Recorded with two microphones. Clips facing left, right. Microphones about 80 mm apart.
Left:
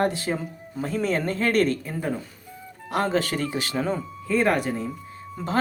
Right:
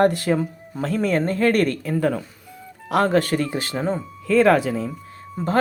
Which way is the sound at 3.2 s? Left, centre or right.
Right.